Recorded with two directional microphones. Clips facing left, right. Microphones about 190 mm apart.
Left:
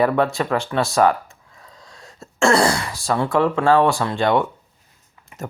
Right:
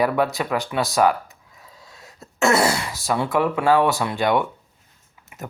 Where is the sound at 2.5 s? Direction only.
25° right (ahead or behind).